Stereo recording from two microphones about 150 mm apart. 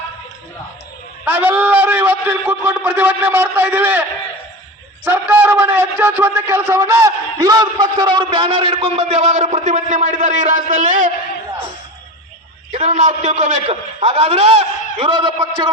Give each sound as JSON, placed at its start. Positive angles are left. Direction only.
{"t": 1.2, "sound": "a man's voice", "side_deg": -10}
{"t": 5.0, "sound": "a man's voice", "side_deg": -15}
{"t": 12.7, "sound": "a man's voice", "side_deg": -50}